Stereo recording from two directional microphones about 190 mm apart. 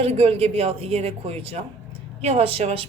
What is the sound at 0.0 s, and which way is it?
A woman's voice, 30° right (ahead or behind).